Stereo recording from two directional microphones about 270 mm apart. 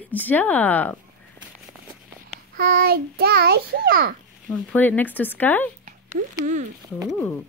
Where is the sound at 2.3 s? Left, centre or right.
Right.